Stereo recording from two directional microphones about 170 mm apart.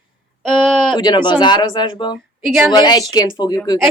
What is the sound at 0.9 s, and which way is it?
Speech, 25° left (ahead or behind).